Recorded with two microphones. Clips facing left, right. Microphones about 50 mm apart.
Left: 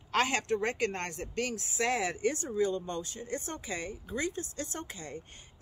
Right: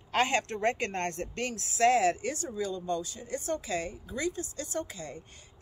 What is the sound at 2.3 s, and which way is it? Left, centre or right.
Speech, left.